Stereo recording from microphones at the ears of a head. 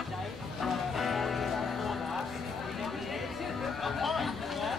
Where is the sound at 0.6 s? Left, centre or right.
Left.